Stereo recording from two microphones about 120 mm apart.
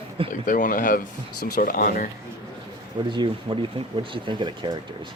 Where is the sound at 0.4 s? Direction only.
90° left.